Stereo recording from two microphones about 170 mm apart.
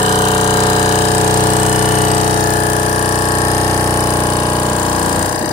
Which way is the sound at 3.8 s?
20° left (ahead or behind).